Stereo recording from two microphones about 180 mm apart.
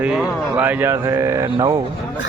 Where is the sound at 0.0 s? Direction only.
5° right (ahead or behind); by 1.8 s 20° right (ahead or behind).